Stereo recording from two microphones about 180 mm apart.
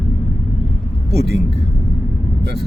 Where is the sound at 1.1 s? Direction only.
65° right (ahead or behind).